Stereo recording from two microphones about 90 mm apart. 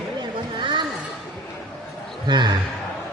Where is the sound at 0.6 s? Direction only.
60° right (ahead or behind).